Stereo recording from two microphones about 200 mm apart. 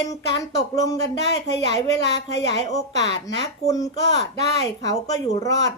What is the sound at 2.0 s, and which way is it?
Speech, 60° left (ahead or behind).